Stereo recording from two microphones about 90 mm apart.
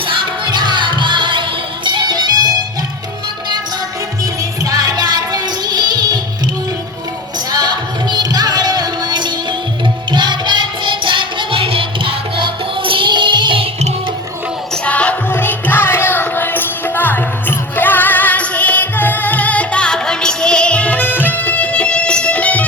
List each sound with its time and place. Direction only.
0.2 s music: 55° right (ahead or behind)
4.2 s music: 40° right (ahead or behind)
7.5 s music: 50° right (ahead or behind)
14.8 s music: 15° left (ahead or behind)